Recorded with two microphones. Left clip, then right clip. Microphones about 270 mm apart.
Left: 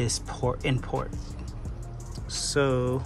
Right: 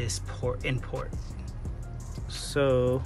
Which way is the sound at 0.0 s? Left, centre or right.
Centre.